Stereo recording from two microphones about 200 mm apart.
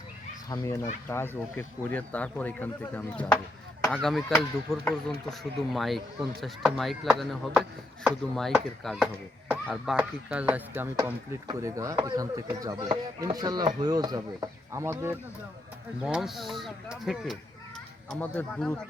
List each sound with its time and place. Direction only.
0.5 s speech: 15° left (ahead or behind); by 15.1 s 15° right (ahead or behind)
16.0 s speech: centre (ahead or behind)